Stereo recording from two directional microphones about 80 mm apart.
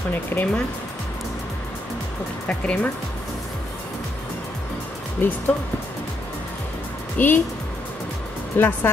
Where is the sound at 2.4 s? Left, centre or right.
Centre.